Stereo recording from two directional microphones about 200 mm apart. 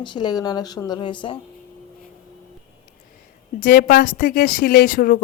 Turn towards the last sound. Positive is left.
turn(degrees=45)  # may be behind; listen again after turning